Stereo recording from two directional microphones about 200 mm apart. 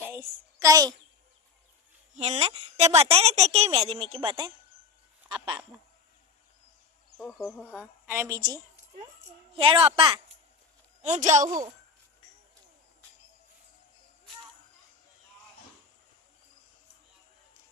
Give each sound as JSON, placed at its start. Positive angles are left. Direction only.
{"t": 0.1, "sound": "a sound", "side_deg": -15}
{"t": 2.1, "sound": "a woman's voice", "side_deg": -30}
{"t": 7.2, "sound": "a woman's voice", "side_deg": 0}
{"t": 11.0, "sound": "a woman's voice", "side_deg": -35}
{"t": 11.4, "sound": "a woman's voice", "side_deg": -20}